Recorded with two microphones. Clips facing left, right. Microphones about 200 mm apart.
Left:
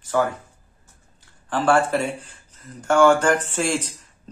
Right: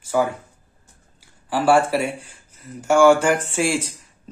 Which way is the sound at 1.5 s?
10° right (ahead or behind).